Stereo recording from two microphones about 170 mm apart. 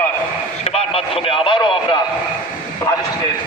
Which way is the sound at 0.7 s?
35° left (ahead or behind).